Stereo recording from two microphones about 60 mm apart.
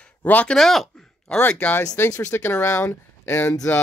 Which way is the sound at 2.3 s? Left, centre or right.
Left.